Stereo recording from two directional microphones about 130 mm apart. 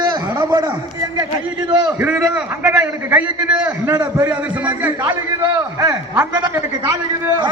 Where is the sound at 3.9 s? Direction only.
25° right (ahead or behind).